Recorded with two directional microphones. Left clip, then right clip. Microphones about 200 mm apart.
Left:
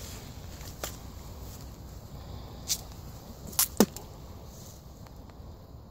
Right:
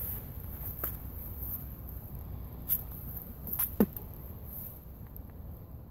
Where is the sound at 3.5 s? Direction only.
25° left (ahead or behind).